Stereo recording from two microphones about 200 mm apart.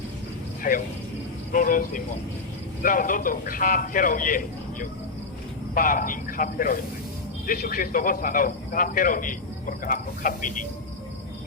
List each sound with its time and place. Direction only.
0.7 s a man's voice: 40° left (ahead or behind)